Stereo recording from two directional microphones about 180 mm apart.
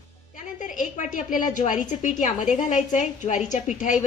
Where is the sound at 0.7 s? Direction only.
45° left (ahead or behind).